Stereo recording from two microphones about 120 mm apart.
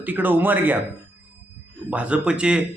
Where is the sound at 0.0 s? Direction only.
15° right (ahead or behind).